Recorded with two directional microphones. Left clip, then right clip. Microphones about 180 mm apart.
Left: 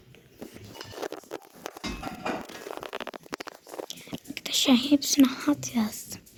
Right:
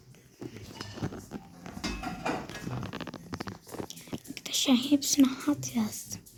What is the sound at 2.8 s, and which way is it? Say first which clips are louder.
Stomach rumble: left 4 dB; 40° left (ahead or behind).